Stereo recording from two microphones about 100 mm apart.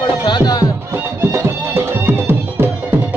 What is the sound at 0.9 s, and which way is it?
Music, 25° right (ahead or behind).